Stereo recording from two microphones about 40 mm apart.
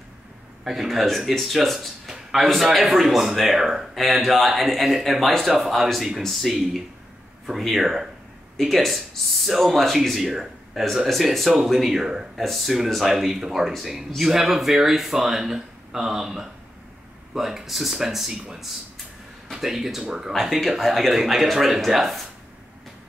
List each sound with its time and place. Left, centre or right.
0.7 s speech: centre
7.6 s speech: centre
19.5 s speech: centre
20.6 s speech: centre